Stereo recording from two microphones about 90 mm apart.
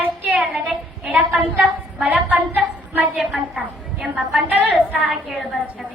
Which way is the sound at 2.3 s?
20° right (ahead or behind).